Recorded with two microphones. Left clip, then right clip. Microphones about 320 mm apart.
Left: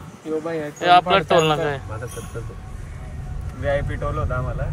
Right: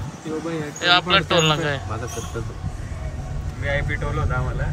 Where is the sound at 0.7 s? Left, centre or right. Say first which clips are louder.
Left 2 dB; centre.